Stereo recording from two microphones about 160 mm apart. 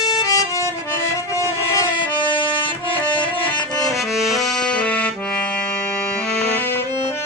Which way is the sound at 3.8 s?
Centre (ahead or behind).